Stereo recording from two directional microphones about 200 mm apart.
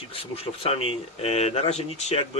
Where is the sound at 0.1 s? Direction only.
30° left (ahead or behind).